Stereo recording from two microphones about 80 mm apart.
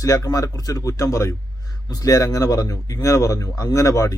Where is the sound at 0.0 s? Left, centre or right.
Left.